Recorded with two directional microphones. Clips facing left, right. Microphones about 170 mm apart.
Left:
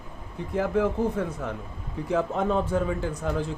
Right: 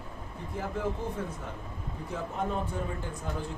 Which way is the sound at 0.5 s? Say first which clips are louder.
Left 9 dB; 90° left.